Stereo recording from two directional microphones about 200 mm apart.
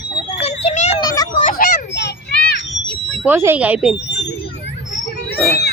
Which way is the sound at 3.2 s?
10° right (ahead or behind).